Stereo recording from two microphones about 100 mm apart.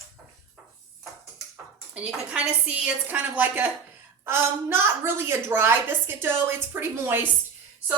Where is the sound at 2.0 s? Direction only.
10° right (ahead or behind).